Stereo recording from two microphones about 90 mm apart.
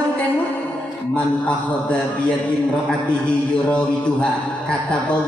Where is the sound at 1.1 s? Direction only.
15° left (ahead or behind).